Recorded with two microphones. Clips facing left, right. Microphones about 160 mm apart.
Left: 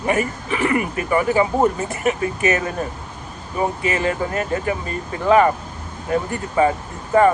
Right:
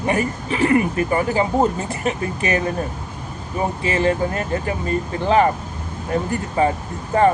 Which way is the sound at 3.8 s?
30° right (ahead or behind).